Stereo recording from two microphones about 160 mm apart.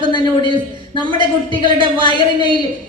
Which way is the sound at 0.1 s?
30° left (ahead or behind).